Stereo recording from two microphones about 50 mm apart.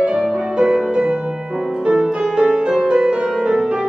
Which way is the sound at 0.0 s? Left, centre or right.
Centre.